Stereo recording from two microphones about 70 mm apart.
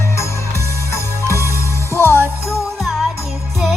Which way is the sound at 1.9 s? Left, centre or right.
Left.